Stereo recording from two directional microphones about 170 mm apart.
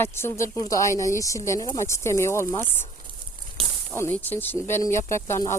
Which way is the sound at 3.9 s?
10° left (ahead or behind).